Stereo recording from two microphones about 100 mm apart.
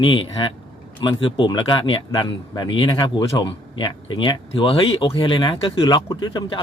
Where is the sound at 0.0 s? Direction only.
55° left (ahead or behind).